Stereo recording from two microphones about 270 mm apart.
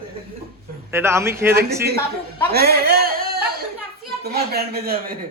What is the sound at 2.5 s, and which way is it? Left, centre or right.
Speech, right.